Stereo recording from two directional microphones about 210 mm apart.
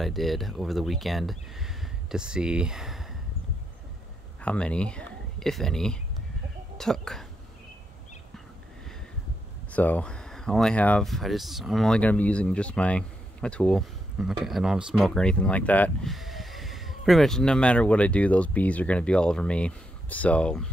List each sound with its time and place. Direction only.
0.0 s speech: centre (ahead or behind)
4.4 s speech: 5° left (ahead or behind)
9.7 s speech: 5° left (ahead or behind)